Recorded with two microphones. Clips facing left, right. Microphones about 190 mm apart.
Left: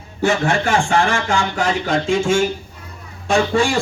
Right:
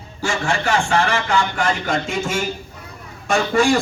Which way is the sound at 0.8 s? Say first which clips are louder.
Left 2 dB; 15° left (ahead or behind).